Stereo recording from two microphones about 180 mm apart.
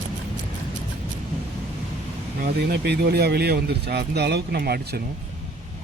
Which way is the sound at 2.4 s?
60° right (ahead or behind).